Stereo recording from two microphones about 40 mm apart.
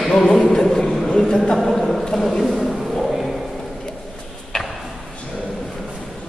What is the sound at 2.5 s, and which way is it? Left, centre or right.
Wild animals, centre.